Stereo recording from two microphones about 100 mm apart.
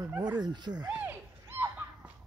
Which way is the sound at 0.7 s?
10° right (ahead or behind).